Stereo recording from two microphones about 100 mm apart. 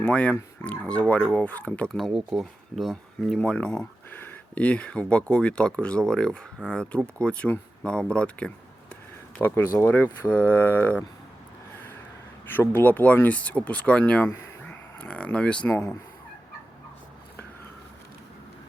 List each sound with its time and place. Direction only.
0.0 s speech: 10° left (ahead or behind)
2.0 s speech: centre (ahead or behind)
8.1 s a sound: 10° left (ahead or behind)
9.4 s speech: 25° left (ahead or behind)
12.5 s speech: 20° left (ahead or behind)
15.7 s speech: 25° left (ahead or behind)